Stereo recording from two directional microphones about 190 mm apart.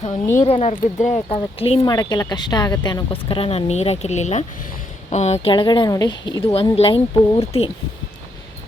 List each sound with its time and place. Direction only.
0.3 s speech: 30° left (ahead or behind)